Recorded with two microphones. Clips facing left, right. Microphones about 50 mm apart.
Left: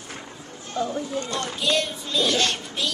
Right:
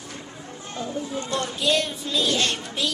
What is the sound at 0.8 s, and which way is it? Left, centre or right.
Speech, centre.